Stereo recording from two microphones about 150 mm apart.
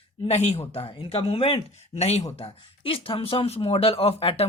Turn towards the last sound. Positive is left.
turn(degrees=40)  # may be behind; listen again after turning